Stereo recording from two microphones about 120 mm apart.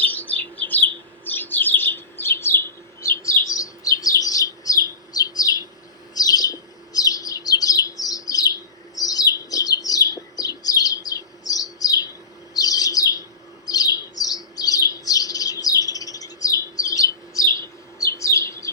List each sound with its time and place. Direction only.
0.0 s bird: 15° left (ahead or behind); by 5.6 s 30° left (ahead or behind)
6.1 s chirp: 30° left (ahead or behind)
12.5 s bird: 30° left (ahead or behind)